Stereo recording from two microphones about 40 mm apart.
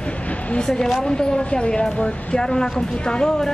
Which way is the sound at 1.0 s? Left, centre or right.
Centre.